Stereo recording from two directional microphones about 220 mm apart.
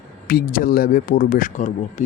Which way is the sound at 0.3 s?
40° left (ahead or behind).